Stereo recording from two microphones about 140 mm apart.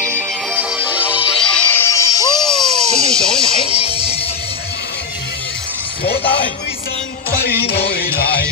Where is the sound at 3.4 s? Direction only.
40° left (ahead or behind).